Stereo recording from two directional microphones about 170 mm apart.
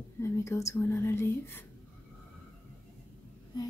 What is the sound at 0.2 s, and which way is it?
A woman's voice, 15° left (ahead or behind).